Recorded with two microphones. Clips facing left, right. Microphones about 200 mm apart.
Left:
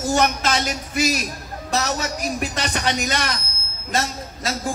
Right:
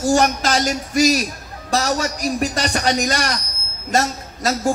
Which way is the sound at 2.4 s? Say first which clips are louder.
Right 5 dB; 40° right (ahead or behind).